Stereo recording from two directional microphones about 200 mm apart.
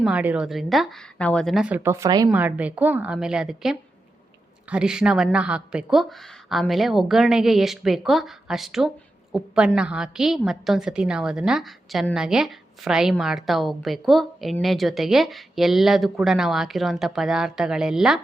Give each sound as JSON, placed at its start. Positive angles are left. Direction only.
{"t": 0.0, "sound": "a woman's voice", "side_deg": -5}